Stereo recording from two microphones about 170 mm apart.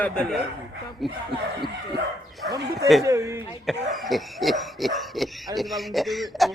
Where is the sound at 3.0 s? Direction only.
20° right (ahead or behind).